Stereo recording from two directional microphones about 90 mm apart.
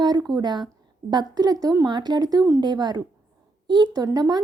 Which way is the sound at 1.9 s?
55° right (ahead or behind).